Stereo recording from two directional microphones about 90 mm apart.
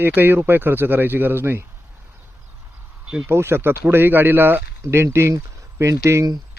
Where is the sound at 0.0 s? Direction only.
25° right (ahead or behind).